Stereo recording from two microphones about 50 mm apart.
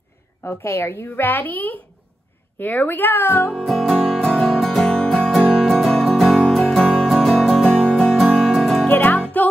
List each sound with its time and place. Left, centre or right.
0.4 s a woman's voice: left
1.0 s a woman's voice: left
3.6 s music: centre
4.9 s music: centre
5.3 s music: centre
8.9 s music: left